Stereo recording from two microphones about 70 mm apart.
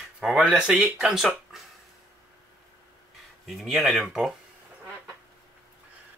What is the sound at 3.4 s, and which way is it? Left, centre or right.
Speech, centre.